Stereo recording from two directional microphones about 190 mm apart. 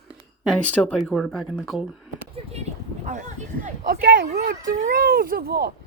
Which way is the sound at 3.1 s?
40° right (ahead or behind).